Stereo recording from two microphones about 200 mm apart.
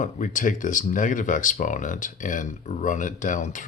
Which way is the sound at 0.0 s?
40° left (ahead or behind).